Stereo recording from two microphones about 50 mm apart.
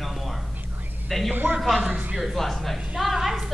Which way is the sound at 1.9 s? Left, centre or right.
Right.